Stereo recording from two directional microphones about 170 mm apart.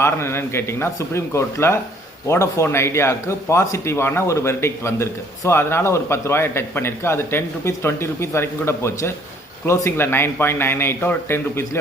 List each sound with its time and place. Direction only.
0.0 s a man's voice: 15° left (ahead or behind)